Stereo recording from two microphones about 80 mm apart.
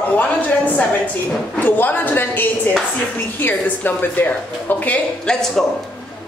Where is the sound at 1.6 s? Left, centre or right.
Left.